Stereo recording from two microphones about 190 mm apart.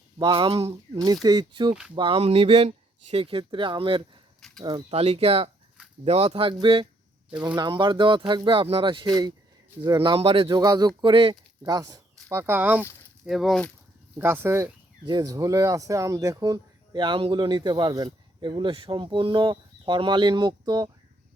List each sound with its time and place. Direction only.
0.2 s speech: 25° right (ahead or behind)
4.4 s a sound: centre (ahead or behind)
4.6 s speech: 25° right (ahead or behind); by 13.7 s 5° left (ahead or behind)
14.2 s speech: 10° right (ahead or behind)